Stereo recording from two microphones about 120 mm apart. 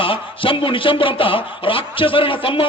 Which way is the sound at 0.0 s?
45° left (ahead or behind).